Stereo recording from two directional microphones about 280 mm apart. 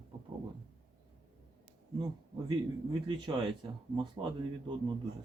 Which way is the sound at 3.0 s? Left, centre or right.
Centre.